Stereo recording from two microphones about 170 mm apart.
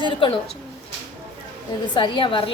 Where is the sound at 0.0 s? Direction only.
30° left (ahead or behind).